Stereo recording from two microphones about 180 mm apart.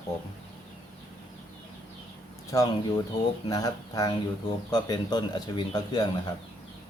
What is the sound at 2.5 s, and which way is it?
Speech, 20° left (ahead or behind).